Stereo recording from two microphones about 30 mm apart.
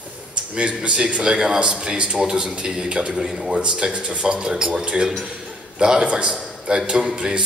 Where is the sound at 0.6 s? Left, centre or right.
Right.